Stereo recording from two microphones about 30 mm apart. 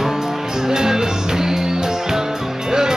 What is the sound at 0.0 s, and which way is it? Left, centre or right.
Music, centre.